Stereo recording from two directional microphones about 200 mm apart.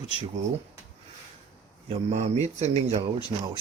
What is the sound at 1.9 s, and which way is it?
Speech, 30° right (ahead or behind).